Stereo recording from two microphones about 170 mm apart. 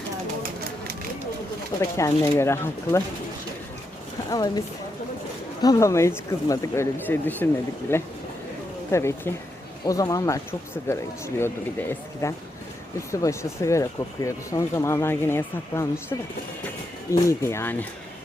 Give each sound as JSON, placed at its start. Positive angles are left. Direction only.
{"t": 1.8, "sound": "speech", "side_deg": 20}
{"t": 4.3, "sound": "speech", "side_deg": 20}
{"t": 5.6, "sound": "speech", "side_deg": 20}